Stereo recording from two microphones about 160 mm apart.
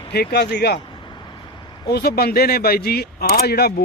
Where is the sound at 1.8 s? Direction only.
85° left.